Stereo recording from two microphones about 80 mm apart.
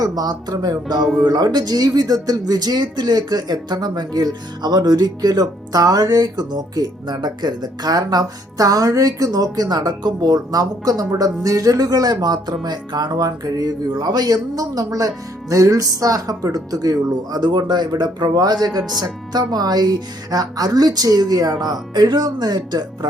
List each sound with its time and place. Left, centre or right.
0.0 s speech: right
0.9 s speech: centre
1.2 s speech: right